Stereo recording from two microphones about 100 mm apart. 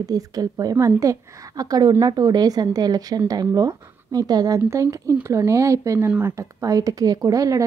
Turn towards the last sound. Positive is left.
turn(degrees=-35)  # may be behind; listen again after turning